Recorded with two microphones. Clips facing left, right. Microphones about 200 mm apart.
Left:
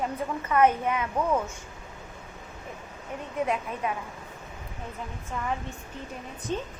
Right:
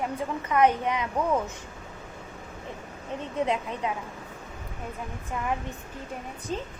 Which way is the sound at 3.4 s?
20° right (ahead or behind).